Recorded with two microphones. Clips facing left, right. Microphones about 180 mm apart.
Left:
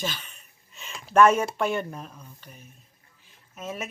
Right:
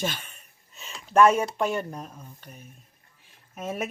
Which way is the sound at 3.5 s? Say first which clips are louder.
Right 3 dB; 55° right (ahead or behind).